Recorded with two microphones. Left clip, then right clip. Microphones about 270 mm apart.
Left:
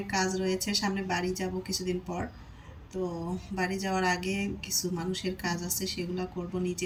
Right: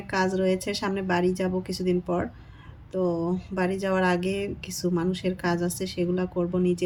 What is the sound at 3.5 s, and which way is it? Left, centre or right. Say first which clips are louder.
Speech: right 4 dB; centre.